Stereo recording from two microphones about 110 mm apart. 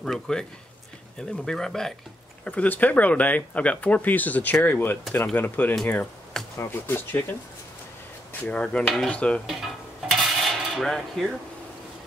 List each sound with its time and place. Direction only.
0.0 s speech: 5° left (ahead or behind); by 7.3 s 20° left (ahead or behind)
8.3 s speech: 10° left (ahead or behind)
9.5 s dishes: centre (ahead or behind)